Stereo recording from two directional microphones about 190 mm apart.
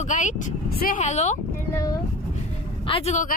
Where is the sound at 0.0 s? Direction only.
40° left (ahead or behind).